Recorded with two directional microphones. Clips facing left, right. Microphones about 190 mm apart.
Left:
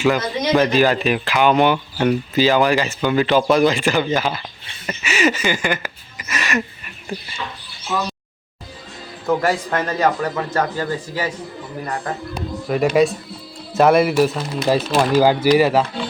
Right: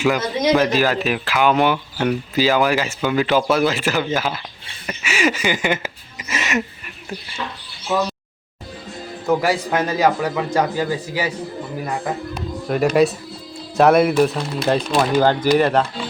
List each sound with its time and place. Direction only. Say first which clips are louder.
0.0 s speech: even; centre (ahead or behind); by 6.6 s 25° right (ahead or behind)
9.2 s speech: even; 5° right (ahead or behind)
12.6 s speech: even; centre (ahead or behind)